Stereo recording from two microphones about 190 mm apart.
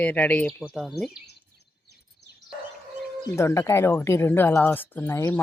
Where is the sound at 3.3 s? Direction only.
15° left (ahead or behind).